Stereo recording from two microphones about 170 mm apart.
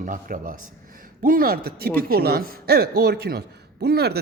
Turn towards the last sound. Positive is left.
turn(degrees=-70)  # may be behind; listen again after turning